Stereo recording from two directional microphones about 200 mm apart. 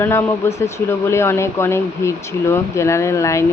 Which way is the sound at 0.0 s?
15° left (ahead or behind).